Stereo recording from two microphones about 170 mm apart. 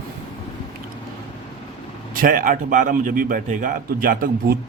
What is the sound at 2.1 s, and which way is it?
A man's voice, 55° right (ahead or behind).